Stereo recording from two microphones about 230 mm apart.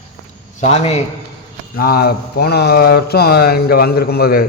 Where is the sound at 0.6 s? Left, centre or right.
Left.